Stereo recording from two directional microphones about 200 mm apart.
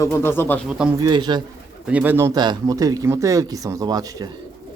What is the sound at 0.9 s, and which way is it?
Speech, 20° right (ahead or behind).